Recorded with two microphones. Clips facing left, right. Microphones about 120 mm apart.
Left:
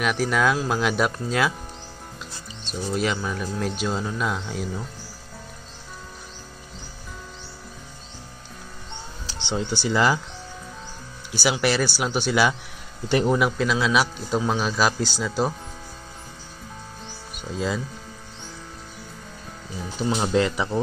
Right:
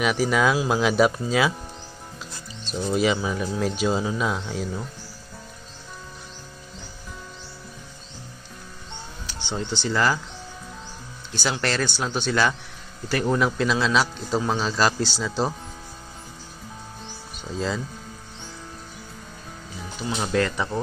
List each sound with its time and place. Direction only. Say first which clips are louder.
0.0 s speech: right 1 dB; centre (ahead or behind)
2.6 s speech: right 3 dB; centre (ahead or behind)
9.2 s music: left 1 dB; 30° left (ahead or behind)
9.5 s speech: left 2 dB; 10° left (ahead or behind)
11.3 s speech: left 3 dB; 10° left (ahead or behind)
17.4 s speech: left 1 dB; 5° left (ahead or behind)
20.0 s speech: left 4 dB; 35° left (ahead or behind)
20.3 s speech: even; 15° left (ahead or behind)